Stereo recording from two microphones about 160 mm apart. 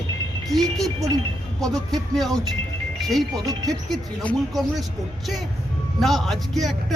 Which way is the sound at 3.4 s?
25° right (ahead or behind).